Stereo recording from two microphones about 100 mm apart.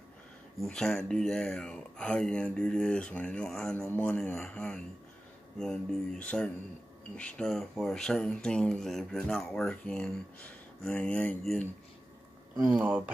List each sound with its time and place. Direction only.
0.6 s speech: 5° left (ahead or behind)
12.8 s speech: 20° right (ahead or behind)